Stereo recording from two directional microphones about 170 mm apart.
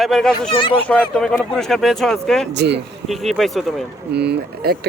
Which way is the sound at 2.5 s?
85° right.